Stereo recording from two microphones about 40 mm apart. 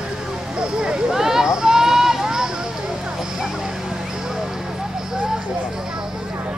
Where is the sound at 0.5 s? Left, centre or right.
Right.